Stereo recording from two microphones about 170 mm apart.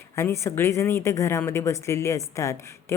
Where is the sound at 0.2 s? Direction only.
15° left (ahead or behind).